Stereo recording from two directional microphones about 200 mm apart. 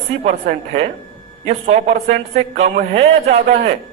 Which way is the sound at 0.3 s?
35° right (ahead or behind).